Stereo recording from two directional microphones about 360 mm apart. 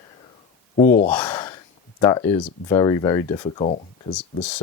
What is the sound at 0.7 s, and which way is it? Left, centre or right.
Speech, left.